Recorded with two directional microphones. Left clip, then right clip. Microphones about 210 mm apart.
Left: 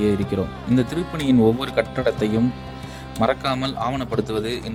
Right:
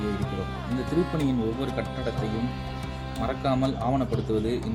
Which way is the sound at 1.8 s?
45° left (ahead or behind).